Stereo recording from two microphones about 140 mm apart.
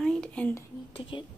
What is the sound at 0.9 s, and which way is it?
Speech, 40° left (ahead or behind).